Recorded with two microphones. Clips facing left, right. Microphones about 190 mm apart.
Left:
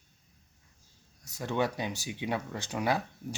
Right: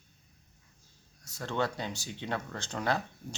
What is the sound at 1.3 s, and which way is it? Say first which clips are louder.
Speech: left 2 dB; 15° left (ahead or behind).